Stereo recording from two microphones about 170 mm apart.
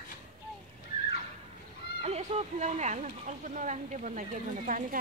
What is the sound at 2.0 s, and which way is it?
Speech, 40° right (ahead or behind).